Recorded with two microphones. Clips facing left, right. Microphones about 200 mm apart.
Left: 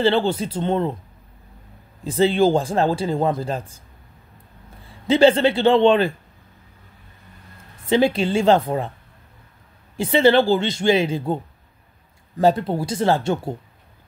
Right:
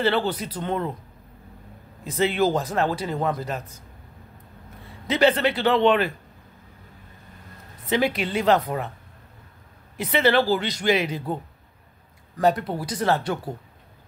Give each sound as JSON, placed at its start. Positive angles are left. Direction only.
{"t": 0.0, "sound": "speech", "side_deg": 25}
{"t": 2.0, "sound": "speech", "side_deg": 30}
{"t": 5.0, "sound": "speech", "side_deg": 30}
{"t": 7.8, "sound": "speech", "side_deg": 30}
{"t": 9.9, "sound": "speech", "side_deg": 30}
{"t": 12.4, "sound": "speech", "side_deg": 25}